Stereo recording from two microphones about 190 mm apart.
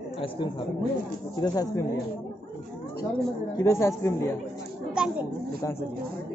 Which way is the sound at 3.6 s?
15° left (ahead or behind).